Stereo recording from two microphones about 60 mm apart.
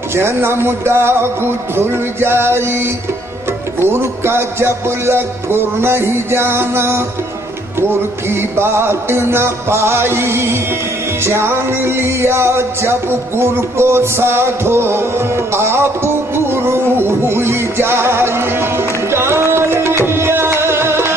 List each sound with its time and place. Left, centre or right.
0.1 s music: right
3.9 s music: right
8.3 s music: right